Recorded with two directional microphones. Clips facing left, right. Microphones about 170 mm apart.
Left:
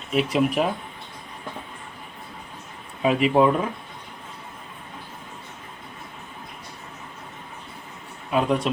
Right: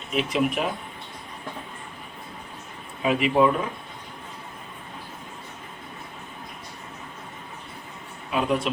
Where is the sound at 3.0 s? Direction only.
35° left (ahead or behind).